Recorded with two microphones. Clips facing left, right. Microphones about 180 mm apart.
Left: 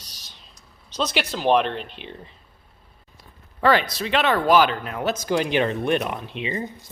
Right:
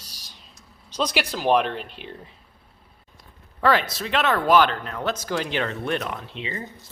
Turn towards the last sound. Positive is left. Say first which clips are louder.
# left 5 dB
turn(degrees=20)  # may be behind; listen again after turning